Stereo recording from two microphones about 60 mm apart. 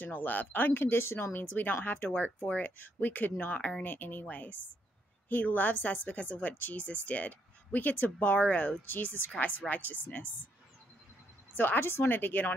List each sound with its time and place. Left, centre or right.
0.0 s a woman's voice: left
8.8 s a woman's voice: left
11.5 s a woman's voice: left